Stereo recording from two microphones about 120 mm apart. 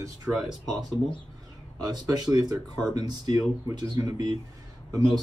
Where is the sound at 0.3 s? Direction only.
5° right (ahead or behind).